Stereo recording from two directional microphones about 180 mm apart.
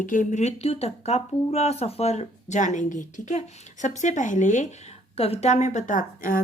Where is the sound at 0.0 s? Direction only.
45° left (ahead or behind).